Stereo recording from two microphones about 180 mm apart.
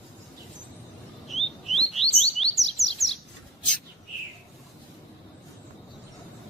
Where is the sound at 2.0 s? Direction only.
35° left (ahead or behind).